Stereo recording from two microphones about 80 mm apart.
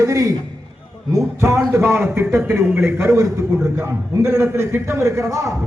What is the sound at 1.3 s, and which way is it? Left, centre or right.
Speech, right.